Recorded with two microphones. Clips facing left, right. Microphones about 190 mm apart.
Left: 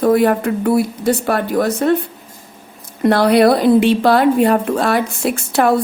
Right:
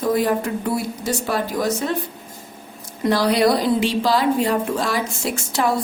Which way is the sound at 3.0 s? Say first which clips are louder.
Left 6 dB; 60° left (ahead or behind).